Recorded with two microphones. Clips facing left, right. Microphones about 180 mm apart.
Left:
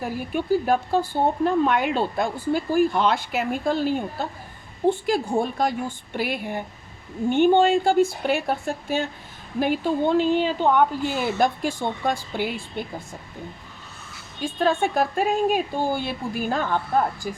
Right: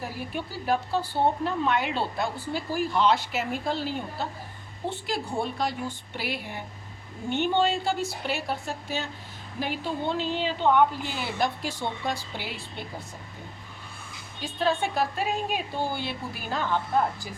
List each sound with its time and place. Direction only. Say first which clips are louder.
0.3 s speech: left 7 dB; 50° left (ahead or behind)
14.4 s speech: left 5 dB; 50° left (ahead or behind)